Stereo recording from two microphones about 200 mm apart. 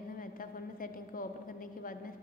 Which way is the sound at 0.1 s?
45° left (ahead or behind).